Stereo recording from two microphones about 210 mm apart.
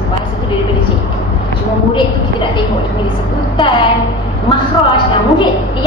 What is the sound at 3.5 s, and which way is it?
A woman's voice, 25° left (ahead or behind).